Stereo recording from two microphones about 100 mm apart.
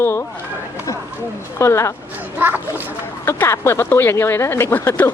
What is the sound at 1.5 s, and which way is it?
Speech, 30° left (ahead or behind).